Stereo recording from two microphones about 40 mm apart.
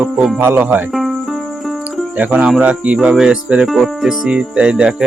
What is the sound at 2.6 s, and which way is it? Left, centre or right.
Speech, right.